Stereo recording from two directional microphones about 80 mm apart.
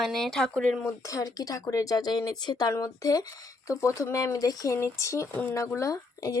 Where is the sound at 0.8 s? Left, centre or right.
Left.